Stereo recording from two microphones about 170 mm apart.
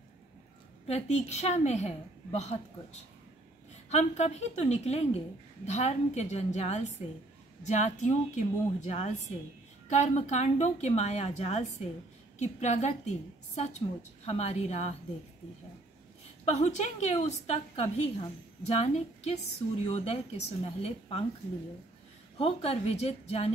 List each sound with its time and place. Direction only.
0.8 s a woman's voice: 40° left (ahead or behind)
16.4 s a woman's voice: 40° left (ahead or behind)
22.4 s a woman's voice: 35° left (ahead or behind)